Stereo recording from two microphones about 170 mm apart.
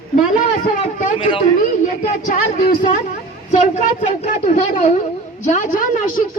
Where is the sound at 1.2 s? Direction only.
30° left (ahead or behind).